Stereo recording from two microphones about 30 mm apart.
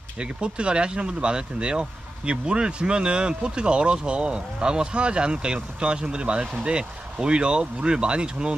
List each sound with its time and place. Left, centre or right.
0.2 s speech: right
6.7 s speech: right